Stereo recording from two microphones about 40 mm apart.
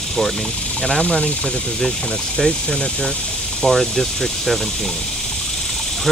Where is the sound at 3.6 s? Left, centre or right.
Centre.